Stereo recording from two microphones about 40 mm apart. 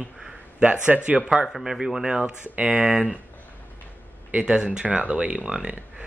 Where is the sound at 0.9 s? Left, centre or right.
Right.